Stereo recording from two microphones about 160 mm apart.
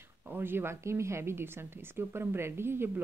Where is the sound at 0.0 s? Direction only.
15° right (ahead or behind).